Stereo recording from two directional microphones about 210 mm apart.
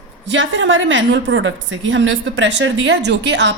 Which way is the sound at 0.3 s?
60° right (ahead or behind).